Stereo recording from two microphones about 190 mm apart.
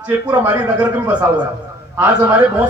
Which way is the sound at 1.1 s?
5° right (ahead or behind).